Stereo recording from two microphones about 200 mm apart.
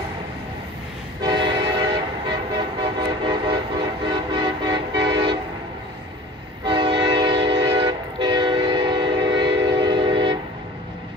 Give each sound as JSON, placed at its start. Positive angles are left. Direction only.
{"t": 1.2, "sound": "train", "side_deg": -25}
{"t": 2.8, "sound": "vehicle", "side_deg": -25}
{"t": 6.6, "sound": "train", "side_deg": -25}